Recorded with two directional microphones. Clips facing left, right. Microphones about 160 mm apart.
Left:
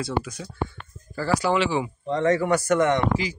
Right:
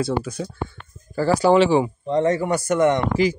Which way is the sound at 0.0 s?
30° right (ahead or behind).